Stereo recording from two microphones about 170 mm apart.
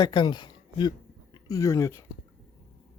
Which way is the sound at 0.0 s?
25° left (ahead or behind).